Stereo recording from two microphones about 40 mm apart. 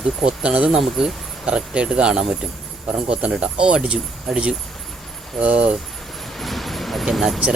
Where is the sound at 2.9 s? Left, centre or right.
Right.